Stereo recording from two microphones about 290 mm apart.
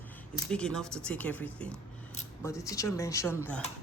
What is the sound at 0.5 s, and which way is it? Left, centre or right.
Speech, centre.